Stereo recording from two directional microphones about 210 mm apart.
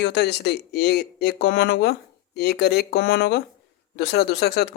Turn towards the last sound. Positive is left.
turn(degrees=50)  # may be behind; listen again after turning